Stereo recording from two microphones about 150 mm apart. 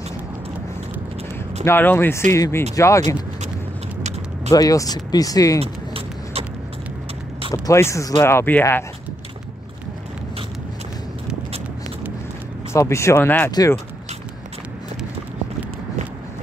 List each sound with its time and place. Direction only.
1.6 s speech: 15° left (ahead or behind)
4.5 s speech: 25° left (ahead or behind)
5.6 s a sound: 40° right (ahead or behind)
7.5 s speech: 20° left (ahead or behind)
12.7 s speech: 20° left (ahead or behind)
13.5 s speech: 25° left (ahead or behind)